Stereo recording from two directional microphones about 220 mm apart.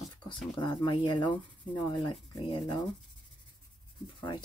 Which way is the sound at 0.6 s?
20° left (ahead or behind).